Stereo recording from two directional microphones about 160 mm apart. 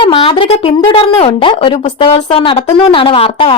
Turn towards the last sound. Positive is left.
turn(degrees=35)  # may be behind; listen again after turning